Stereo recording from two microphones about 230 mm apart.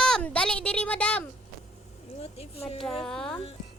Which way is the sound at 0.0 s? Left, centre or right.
Centre.